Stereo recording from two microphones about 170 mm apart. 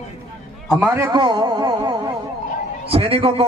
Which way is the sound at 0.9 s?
25° right (ahead or behind).